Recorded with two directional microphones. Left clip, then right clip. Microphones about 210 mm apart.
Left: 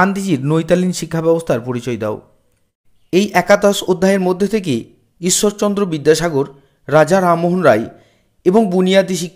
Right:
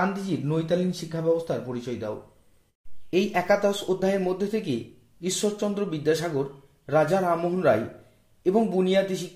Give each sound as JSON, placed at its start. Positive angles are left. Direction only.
{"t": 0.0, "sound": "speech", "side_deg": 35}